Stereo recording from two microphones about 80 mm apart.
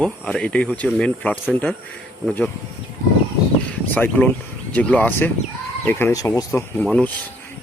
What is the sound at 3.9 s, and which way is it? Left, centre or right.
Speech, left.